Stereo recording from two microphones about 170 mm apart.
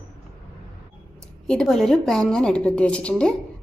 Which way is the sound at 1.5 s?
5° left (ahead or behind).